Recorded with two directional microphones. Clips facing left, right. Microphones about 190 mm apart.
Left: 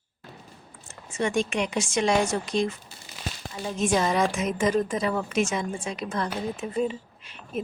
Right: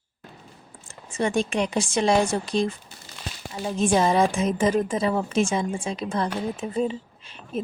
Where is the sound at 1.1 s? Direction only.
35° right (ahead or behind).